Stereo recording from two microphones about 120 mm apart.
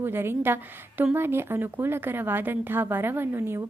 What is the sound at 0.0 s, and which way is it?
A woman's voice, 20° right (ahead or behind).